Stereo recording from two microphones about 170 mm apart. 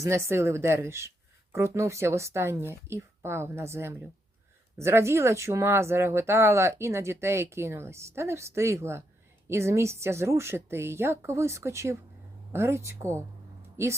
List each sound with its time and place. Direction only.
0.0 s speech: 15° right (ahead or behind)